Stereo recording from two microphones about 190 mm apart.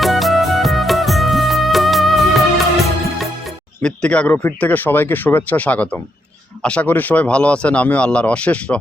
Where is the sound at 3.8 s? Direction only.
5° left (ahead or behind).